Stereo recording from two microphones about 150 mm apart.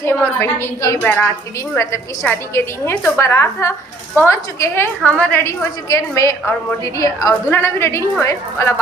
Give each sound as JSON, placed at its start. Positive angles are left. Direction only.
{"t": 0.0, "sound": "a woman's voice", "side_deg": 15}